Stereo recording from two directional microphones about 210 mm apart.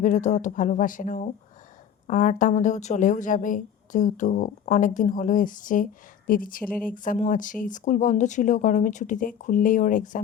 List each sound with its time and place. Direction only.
0.0 s speech: 35° left (ahead or behind)